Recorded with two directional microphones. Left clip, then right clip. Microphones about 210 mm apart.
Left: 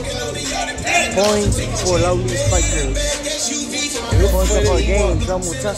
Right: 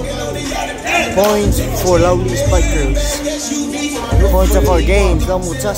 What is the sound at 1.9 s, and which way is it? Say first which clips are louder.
Speech: right 5 dB; 5° right (ahead or behind).